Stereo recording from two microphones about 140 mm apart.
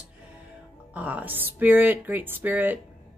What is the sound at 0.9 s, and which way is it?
Speech, 10° right (ahead or behind).